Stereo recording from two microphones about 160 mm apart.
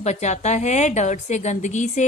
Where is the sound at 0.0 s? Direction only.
45° left (ahead or behind).